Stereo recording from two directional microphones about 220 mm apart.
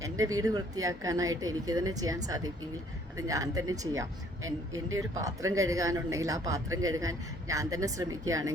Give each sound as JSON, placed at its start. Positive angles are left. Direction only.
{"t": 0.0, "sound": "speech", "side_deg": -15}
{"t": 4.4, "sound": "speech", "side_deg": -65}
{"t": 4.9, "sound": "speech", "side_deg": -15}